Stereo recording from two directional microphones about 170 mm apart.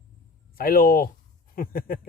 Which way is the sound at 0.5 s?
60° left (ahead or behind).